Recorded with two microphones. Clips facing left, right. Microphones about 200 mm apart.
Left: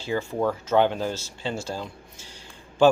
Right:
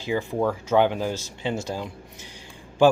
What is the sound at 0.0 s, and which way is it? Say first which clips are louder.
Speech: right 1 dB; 15° right (ahead or behind).